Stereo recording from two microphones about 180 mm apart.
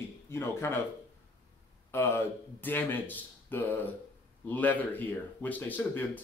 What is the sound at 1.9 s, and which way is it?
Speech, 15° left (ahead or behind).